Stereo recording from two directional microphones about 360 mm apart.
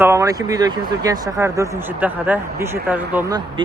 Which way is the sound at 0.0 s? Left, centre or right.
Centre.